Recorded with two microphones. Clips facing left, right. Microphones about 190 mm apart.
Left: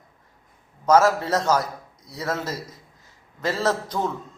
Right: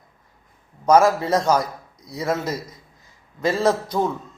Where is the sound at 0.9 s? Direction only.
10° right (ahead or behind).